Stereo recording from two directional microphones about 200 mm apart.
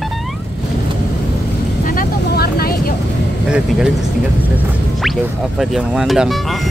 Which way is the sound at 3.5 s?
5° right (ahead or behind).